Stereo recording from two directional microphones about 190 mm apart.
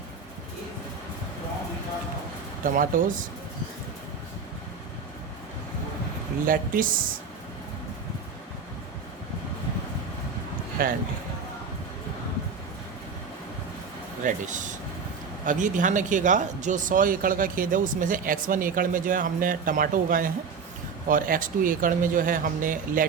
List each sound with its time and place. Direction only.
2.6 s speech: 45° right (ahead or behind)
6.4 s speech: 45° right (ahead or behind)
10.8 s speech: 50° right (ahead or behind)
14.2 s speech: 40° right (ahead or behind)